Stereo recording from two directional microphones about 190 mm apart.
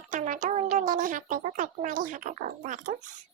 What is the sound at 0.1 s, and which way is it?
Speech, 40° right (ahead or behind).